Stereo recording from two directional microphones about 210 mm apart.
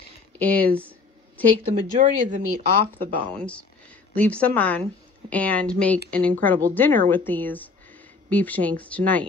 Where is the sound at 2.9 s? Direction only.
25° right (ahead or behind).